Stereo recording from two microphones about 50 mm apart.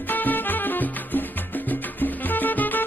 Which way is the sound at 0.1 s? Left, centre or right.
Left.